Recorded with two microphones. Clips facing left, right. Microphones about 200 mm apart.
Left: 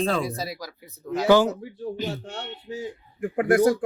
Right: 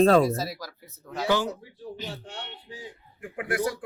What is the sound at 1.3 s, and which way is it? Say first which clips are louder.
Speech: left 8 dB; 85° left.